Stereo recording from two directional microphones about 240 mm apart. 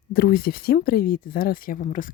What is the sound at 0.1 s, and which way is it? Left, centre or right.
Speech, left.